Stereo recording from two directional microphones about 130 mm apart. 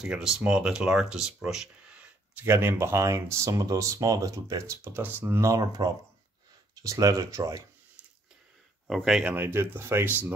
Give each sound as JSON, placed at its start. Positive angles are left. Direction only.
{"t": 0.0, "sound": "speech", "side_deg": -5}
{"t": 2.3, "sound": "speech", "side_deg": -15}
{"t": 8.8, "sound": "speech", "side_deg": -5}